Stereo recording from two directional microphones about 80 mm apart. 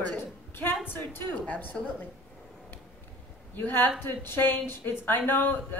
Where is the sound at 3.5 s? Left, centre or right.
Left.